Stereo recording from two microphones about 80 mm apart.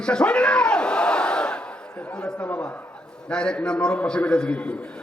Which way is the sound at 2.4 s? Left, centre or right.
Left.